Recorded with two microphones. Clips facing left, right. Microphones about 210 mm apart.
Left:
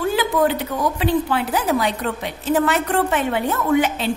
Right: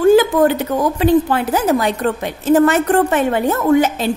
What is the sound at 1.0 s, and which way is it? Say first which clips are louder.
A woman's voice: right 7 dB; 45° right (ahead or behind).